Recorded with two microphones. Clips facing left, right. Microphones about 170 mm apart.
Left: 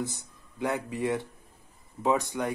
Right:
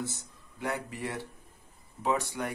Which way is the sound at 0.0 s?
20° left (ahead or behind).